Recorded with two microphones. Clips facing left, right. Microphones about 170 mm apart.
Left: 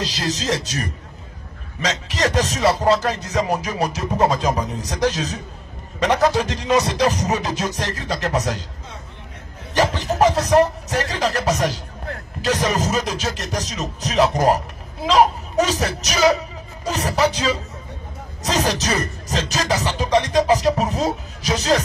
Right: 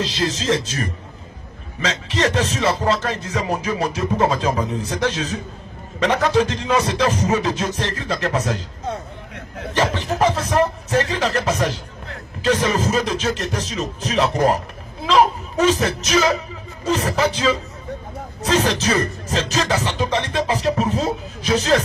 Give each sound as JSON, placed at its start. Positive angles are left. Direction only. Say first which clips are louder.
{"t": 0.0, "sound": "speech", "louder": "right 2 dB", "side_deg": 35}
{"t": 9.8, "sound": "speech", "louder": "left 1 dB", "side_deg": 40}
{"t": 12.1, "sound": "music", "louder": "right 3 dB", "side_deg": 40}
{"t": 13.0, "sound": "speech", "louder": "right 4 dB", "side_deg": 40}
{"t": 18.5, "sound": "speech", "louder": "right 2 dB", "side_deg": 40}